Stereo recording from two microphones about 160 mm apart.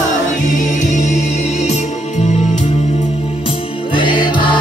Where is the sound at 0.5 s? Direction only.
50° left (ahead or behind).